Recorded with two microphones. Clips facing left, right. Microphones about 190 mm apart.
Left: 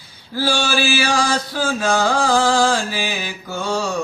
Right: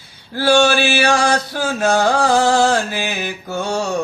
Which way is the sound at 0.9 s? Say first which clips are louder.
Right 3 dB; 65° right (ahead or behind).